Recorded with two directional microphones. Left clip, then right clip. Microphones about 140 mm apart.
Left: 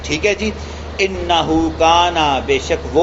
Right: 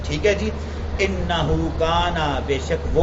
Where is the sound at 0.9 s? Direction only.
40° left (ahead or behind).